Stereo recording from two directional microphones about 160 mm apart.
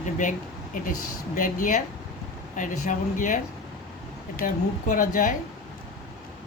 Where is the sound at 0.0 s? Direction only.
55° left (ahead or behind).